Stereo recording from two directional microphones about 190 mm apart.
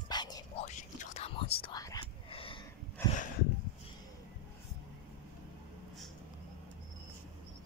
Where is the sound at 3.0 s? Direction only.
10° left (ahead or behind).